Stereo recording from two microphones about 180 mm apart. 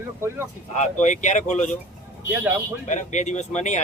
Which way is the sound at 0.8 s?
40° left (ahead or behind).